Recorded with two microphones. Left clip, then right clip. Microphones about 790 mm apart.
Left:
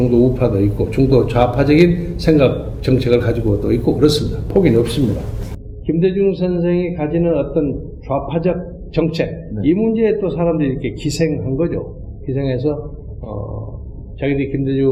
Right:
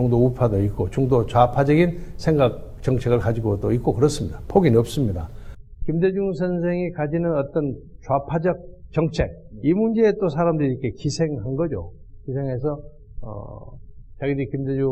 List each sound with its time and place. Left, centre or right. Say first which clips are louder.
0.1 s a man's voice: left 5 dB; right
5.8 s a man's voice: left 6 dB; right
14.2 s a man's voice: left 6 dB; right